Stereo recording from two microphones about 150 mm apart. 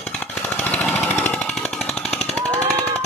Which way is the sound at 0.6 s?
10° left (ahead or behind).